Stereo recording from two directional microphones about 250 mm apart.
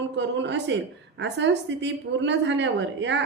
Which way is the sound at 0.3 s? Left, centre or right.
Right.